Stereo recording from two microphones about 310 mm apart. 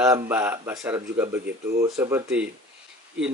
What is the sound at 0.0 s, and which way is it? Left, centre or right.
Speech, centre.